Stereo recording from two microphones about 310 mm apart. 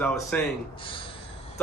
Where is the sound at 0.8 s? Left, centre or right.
Centre.